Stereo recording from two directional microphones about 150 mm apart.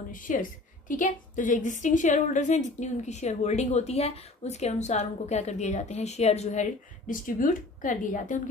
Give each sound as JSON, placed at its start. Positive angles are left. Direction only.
{"t": 0.1, "sound": "a woman's voice", "side_deg": 60}